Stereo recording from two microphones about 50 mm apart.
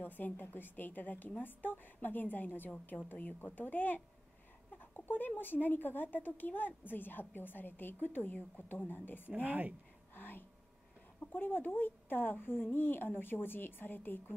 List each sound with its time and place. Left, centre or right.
0.0 s a woman's voice: left
9.3 s speech: right
10.1 s a sound: left
11.3 s a woman's voice: left